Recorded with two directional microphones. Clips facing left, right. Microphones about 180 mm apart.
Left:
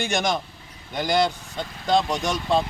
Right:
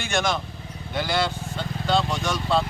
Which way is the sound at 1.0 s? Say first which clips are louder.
Left 3 dB; 40° left (ahead or behind).